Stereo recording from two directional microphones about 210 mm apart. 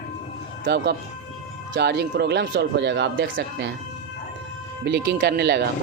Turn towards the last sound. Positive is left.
turn(degrees=-50)  # may be behind; listen again after turning